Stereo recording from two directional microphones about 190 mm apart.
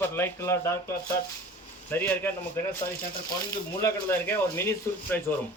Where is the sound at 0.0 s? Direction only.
10° left (ahead or behind).